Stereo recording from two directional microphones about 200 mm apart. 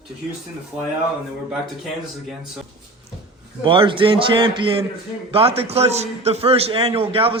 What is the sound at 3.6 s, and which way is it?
A man's voice, 25° right (ahead or behind).